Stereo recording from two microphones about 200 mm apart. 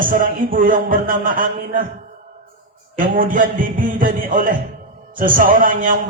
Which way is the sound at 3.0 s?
40° right (ahead or behind).